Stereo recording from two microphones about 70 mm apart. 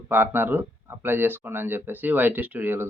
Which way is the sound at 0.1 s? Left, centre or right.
Right.